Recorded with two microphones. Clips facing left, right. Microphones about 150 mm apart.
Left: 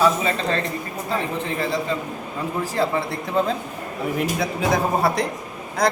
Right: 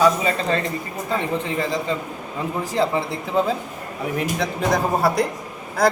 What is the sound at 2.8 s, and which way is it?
Speech, 15° right (ahead or behind).